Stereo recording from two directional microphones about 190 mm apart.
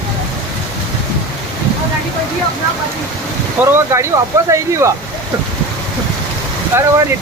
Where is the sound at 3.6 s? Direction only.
15° right (ahead or behind).